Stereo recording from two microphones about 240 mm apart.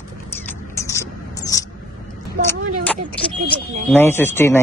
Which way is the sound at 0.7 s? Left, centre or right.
Centre.